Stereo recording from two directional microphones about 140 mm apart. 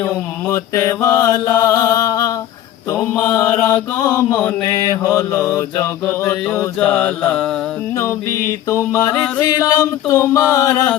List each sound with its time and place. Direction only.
0.0 s mantra: 20° left (ahead or behind)
3.9 s mantra: 25° left (ahead or behind)
5.0 s mantra: 15° left (ahead or behind)